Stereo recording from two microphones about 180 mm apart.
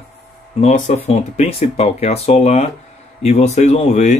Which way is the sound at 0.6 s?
40° left (ahead or behind).